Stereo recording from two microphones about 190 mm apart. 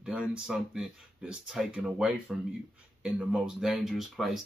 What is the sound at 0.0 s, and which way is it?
Speech, 5° right (ahead or behind).